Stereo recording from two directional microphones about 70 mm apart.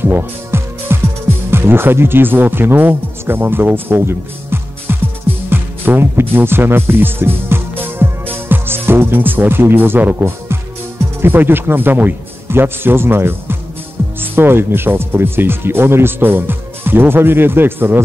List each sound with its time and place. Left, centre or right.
0.0 s music: right
1.5 s a man's voice: right